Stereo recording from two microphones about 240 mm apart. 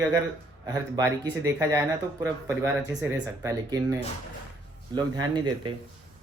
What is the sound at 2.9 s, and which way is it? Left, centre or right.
A man's voice, centre.